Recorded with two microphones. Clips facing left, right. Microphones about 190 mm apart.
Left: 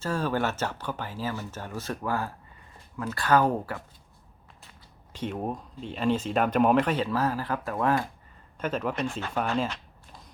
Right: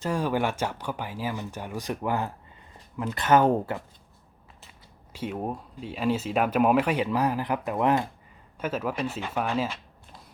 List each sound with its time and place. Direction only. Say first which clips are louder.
0.0 s speech: right 1 dB; 15° right (ahead or behind)
5.1 s speech: even; 5° right (ahead or behind)
8.5 s speech: even; 5° right (ahead or behind)